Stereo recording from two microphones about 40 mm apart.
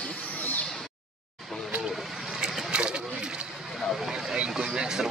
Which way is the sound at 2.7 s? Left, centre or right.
Right.